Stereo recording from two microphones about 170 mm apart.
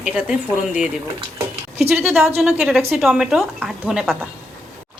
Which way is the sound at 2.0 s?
Centre (ahead or behind).